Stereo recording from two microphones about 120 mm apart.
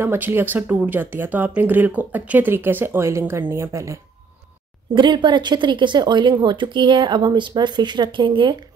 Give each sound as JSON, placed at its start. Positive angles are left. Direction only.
{"t": 0.0, "sound": "speech", "side_deg": -20}
{"t": 4.9, "sound": "speech", "side_deg": -40}